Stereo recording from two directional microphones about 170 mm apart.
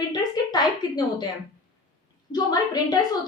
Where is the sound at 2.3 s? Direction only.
25° left (ahead or behind).